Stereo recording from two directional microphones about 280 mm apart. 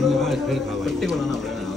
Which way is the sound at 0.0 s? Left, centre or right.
Centre.